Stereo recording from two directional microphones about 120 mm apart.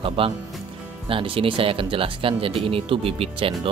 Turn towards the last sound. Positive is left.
turn(degrees=-50)  # may be behind; listen again after turning